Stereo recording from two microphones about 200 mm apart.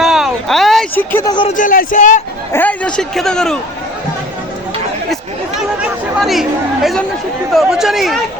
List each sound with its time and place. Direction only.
0.0 s a sound: centre (ahead or behind)
1.3 s speech: 25° left (ahead or behind)
1.5 s speech: 40° left (ahead or behind)
2.5 s a man's voice: 10° left (ahead or behind)
6.2 s a man's voice: centre (ahead or behind)